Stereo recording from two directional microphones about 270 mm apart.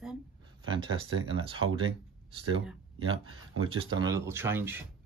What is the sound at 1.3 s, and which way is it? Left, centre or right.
Speech, centre.